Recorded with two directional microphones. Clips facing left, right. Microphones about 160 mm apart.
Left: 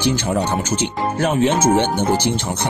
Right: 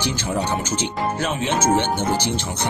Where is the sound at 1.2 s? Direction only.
50° left (ahead or behind).